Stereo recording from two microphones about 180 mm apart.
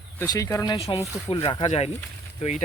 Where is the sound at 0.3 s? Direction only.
15° left (ahead or behind).